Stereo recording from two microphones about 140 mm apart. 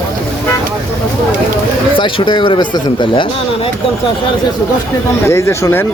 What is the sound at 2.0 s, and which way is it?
Speech, 35° left (ahead or behind).